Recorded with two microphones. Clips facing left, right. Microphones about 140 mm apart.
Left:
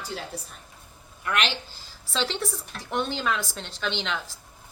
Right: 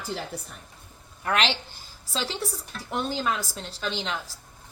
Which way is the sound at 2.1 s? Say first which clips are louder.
Left 2 dB; 10° right (ahead or behind).